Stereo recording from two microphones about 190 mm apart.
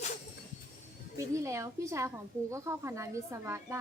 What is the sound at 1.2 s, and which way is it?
A woman's voice, 15° right (ahead or behind).